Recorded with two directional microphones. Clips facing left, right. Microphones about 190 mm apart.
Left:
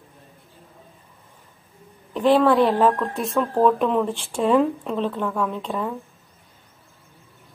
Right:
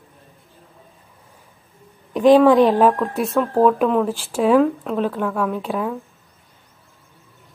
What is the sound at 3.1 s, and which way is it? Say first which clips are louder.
Speech: right 3 dB; centre (ahead or behind).